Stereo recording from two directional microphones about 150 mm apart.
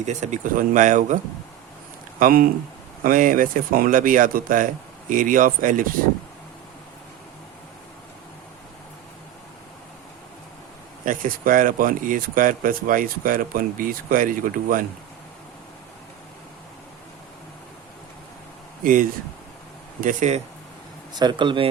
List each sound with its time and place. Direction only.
0.0 s speech: 50° right (ahead or behind)
2.1 s speech: 65° right (ahead or behind)
11.0 s speech: 65° right (ahead or behind)
18.8 s speech: 65° right (ahead or behind)
21.1 s speech: 30° right (ahead or behind)